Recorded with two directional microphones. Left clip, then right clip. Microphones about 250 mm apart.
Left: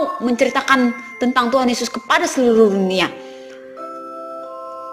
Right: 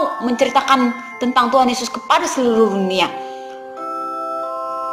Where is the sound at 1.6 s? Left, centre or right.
Left.